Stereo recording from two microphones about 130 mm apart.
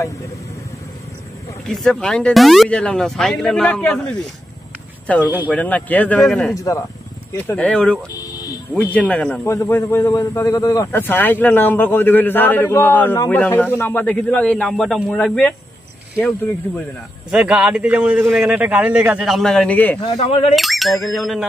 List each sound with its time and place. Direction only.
1.7 s speech: 5° left (ahead or behind)
5.2 s a man's voice: 15° right (ahead or behind)
5.5 s a man's voice: 10° left (ahead or behind)
6.5 s speech: 25° left (ahead or behind)
7.4 s a man's voice: 10° left (ahead or behind)
8.2 s a sound: 30° left (ahead or behind)
8.7 s a man's voice: 10° left (ahead or behind)
17.3 s a man's voice: 10° right (ahead or behind); by 20.0 s 10° left (ahead or behind)
20.2 s speech: 50° left (ahead or behind)
20.5 s speech: centre (ahead or behind)